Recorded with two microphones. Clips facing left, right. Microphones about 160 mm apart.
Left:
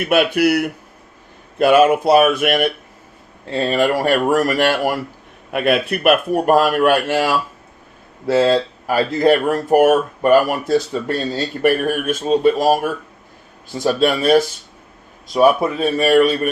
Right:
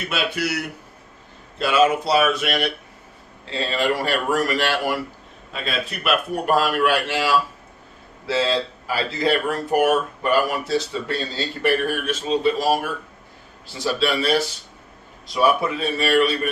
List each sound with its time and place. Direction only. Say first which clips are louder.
0.0 s speech: left 10 dB; 60° left (ahead or behind)
5.5 s speech: left 11 dB; 60° left (ahead or behind); by 16.5 s 45° left (ahead or behind)